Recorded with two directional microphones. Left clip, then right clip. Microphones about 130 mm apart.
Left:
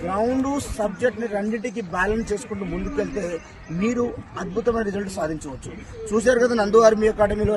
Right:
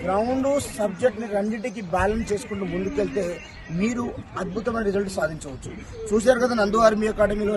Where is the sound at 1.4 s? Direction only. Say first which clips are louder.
Left 1 dB; 30° right (ahead or behind).